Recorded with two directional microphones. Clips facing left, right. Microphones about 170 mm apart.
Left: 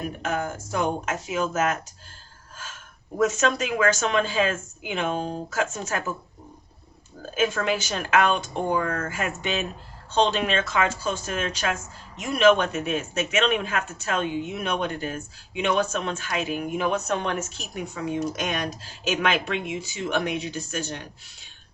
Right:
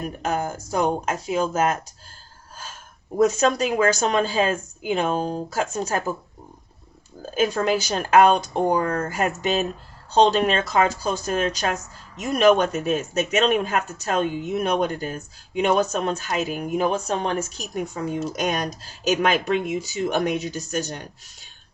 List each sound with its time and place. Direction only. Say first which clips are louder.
0.2 s speech: right 4 dB; 35° right (ahead or behind)
3.2 s speech: right 4 dB; 35° right (ahead or behind)
7.3 s speech: right 3 dB; 35° right (ahead or behind)